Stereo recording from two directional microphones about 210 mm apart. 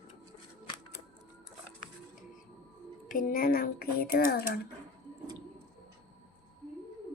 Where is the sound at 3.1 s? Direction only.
40° left (ahead or behind).